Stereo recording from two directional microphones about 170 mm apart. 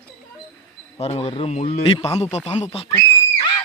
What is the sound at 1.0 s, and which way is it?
A man's voice, 35° left (ahead or behind).